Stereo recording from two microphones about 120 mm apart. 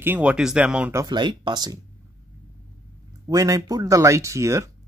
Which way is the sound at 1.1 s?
40° right (ahead or behind).